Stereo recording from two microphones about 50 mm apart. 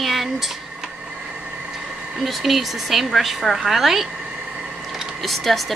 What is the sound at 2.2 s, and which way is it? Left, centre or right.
A woman's voice, centre.